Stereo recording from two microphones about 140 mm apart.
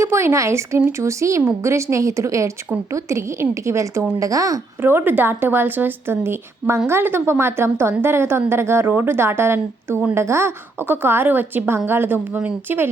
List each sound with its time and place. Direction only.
0.0 s speech: 20° right (ahead or behind)